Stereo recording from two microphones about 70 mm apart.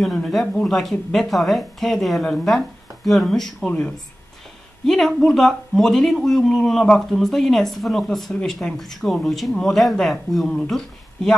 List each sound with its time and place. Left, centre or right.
0.0 s speech: centre
3.6 s speech: centre
4.8 s speech: centre